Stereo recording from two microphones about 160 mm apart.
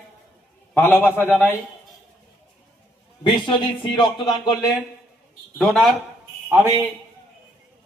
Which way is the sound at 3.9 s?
30° left (ahead or behind).